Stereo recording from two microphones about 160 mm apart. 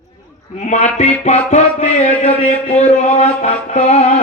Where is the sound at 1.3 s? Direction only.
45° left (ahead or behind).